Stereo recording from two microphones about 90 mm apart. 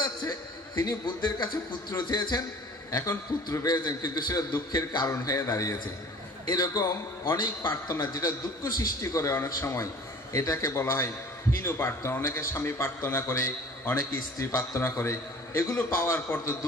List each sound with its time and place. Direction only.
0.7 s a man's voice: 50° left (ahead or behind)
3.6 s a man's voice: 50° left (ahead or behind)
5.2 s a man's voice: 40° left (ahead or behind)